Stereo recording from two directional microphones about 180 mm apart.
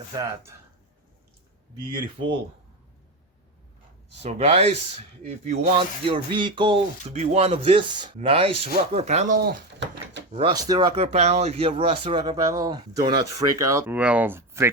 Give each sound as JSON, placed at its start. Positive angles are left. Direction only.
{"t": 0.1, "sound": "speech", "side_deg": -15}
{"t": 4.2, "sound": "speech", "side_deg": -35}
{"t": 10.2, "sound": "door", "side_deg": -85}
{"t": 10.5, "sound": "speech", "side_deg": -20}
{"t": 10.9, "sound": "speech", "side_deg": -35}